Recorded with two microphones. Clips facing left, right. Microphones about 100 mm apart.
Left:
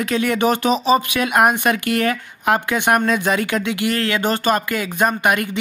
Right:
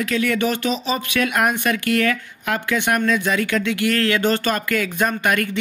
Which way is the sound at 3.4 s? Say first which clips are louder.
Even; 15° left (ahead or behind).